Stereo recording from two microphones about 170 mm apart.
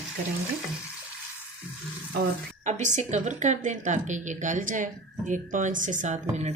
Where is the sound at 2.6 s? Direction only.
45° right (ahead or behind).